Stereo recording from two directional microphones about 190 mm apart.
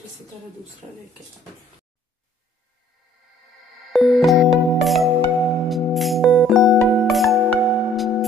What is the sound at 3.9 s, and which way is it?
Music, centre (ahead or behind).